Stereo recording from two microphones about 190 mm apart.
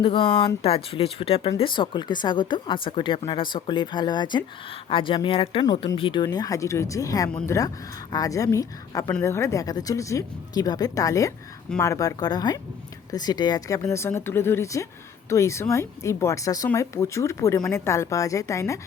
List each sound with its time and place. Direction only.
0.0 s speech: 30° left (ahead or behind)